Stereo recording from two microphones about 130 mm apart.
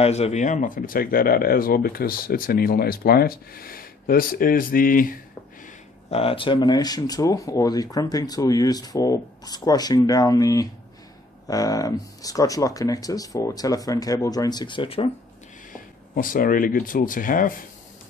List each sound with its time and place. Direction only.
0.0 s speech: 55° left (ahead or behind); by 2.5 s 90° left
3.6 s speech: 90° left
6.0 s speech: 50° left (ahead or behind)
15.7 s speech: 90° left